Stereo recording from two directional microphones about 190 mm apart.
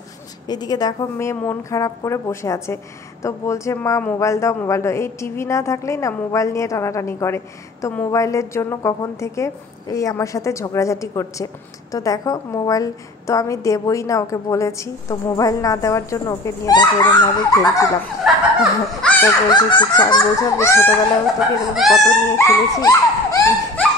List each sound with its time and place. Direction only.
0.5 s a woman's voice: 20° left (ahead or behind)
18.2 s speech: centre (ahead or behind)
19.5 s speech: 25° left (ahead or behind)
21.9 s a sound: 15° left (ahead or behind)